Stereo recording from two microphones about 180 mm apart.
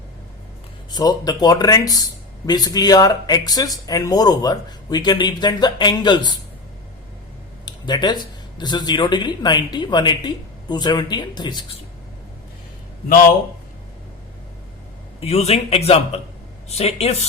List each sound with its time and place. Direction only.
0.9 s speech: 20° left (ahead or behind)
7.6 s speech: 25° left (ahead or behind)
15.2 s a man's voice: 35° left (ahead or behind)